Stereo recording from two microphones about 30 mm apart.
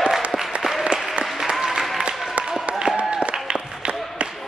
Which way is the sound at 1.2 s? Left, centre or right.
Centre.